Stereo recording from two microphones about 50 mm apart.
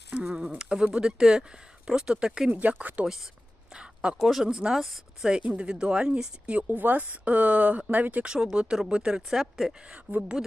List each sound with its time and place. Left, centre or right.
0.3 s speech: right
2.5 s speech: right
3.7 s a sound: centre
4.2 s speech: centre
5.4 s speech: right
8.2 s speech: centre
9.9 s speech: right